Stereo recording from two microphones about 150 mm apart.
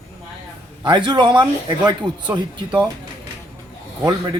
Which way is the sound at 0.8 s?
30° right (ahead or behind).